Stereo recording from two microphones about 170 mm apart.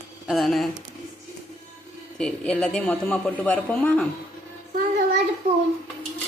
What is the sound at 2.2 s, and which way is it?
A man's voice, 5° left (ahead or behind).